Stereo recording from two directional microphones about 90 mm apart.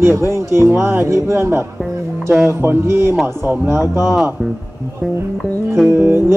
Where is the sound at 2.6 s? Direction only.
30° right (ahead or behind).